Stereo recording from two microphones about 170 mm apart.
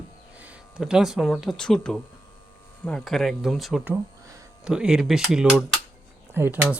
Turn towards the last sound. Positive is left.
turn(degrees=-10)  # may be behind; listen again after turning